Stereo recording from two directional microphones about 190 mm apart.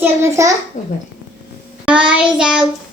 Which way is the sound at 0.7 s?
40° left (ahead or behind).